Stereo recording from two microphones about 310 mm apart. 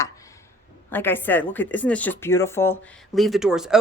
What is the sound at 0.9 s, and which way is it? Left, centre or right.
Speech, centre.